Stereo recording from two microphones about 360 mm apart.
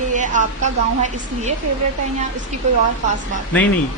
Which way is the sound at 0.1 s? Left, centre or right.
Right.